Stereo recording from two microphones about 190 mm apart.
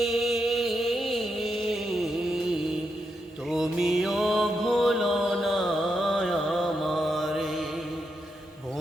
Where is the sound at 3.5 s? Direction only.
Centre (ahead or behind).